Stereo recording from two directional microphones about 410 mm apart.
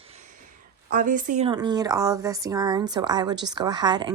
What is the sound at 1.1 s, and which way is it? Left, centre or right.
A woman's voice, centre.